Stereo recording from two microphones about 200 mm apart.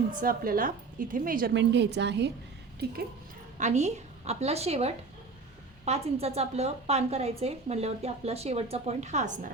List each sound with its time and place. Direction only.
0.1 s a woman's voice: 45° right (ahead or behind)
3.6 s a woman's voice: 35° right (ahead or behind)